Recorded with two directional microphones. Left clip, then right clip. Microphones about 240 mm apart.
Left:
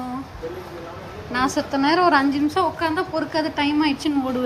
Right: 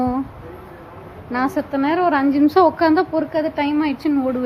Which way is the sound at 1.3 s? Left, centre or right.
Centre.